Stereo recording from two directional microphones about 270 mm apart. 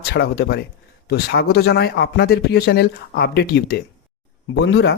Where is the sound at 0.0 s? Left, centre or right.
Left.